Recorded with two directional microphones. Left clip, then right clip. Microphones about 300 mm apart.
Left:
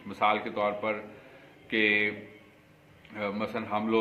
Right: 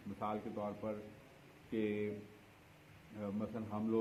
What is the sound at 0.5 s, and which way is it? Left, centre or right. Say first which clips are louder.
A man's voice: left 14 dB; centre.